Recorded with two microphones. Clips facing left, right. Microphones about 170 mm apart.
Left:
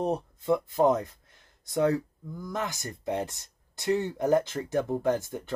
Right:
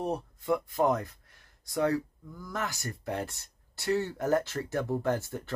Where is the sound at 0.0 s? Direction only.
20° left (ahead or behind).